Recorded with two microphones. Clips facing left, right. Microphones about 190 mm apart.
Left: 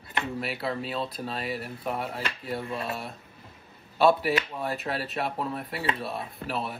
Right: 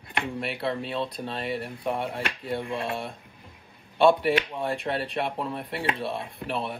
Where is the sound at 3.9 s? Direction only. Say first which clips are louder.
Right 2 dB; 5° left (ahead or behind).